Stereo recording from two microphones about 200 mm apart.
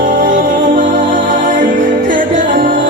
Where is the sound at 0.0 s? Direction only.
40° right (ahead or behind).